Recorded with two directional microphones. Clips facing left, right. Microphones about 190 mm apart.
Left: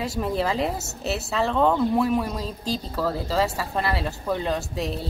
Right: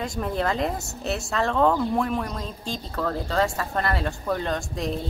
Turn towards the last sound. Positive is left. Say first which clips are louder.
# left 1 dB
turn(degrees=5)  # may be behind; listen again after turning